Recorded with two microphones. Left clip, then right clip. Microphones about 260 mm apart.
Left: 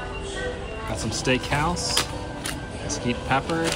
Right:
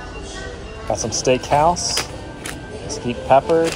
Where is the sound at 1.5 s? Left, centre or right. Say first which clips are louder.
Right 10 dB; left.